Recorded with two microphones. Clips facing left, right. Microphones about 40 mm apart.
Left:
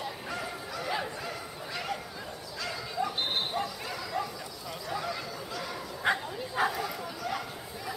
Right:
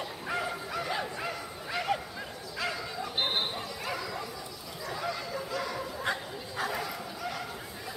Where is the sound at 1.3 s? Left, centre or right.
Centre.